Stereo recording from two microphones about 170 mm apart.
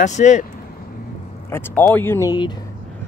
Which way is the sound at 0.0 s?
45° left (ahead or behind).